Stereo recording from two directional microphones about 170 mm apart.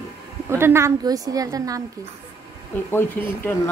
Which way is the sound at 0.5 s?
15° right (ahead or behind).